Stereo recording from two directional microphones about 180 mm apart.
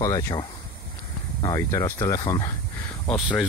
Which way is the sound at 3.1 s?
5° left (ahead or behind).